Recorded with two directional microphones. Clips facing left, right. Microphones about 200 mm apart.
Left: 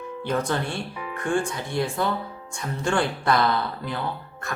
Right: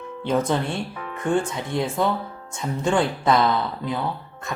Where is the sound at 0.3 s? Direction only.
20° right (ahead or behind).